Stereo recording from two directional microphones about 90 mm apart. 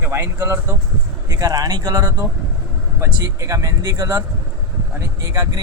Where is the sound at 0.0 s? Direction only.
25° right (ahead or behind).